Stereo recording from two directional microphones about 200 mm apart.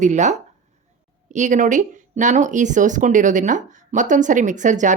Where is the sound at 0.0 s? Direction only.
35° right (ahead or behind).